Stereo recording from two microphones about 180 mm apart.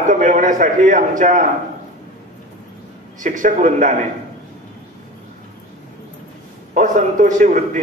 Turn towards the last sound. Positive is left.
turn(degrees=-45)  # may be behind; listen again after turning